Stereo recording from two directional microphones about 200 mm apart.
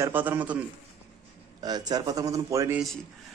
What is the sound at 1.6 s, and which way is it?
A man's voice, 20° right (ahead or behind).